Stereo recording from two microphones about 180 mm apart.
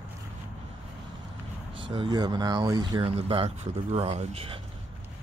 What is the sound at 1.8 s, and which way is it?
Speech, 30° right (ahead or behind).